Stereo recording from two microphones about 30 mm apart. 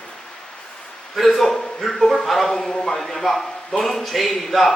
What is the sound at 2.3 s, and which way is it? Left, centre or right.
Speech, centre.